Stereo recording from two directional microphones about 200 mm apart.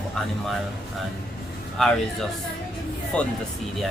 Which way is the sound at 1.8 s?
Centre (ahead or behind).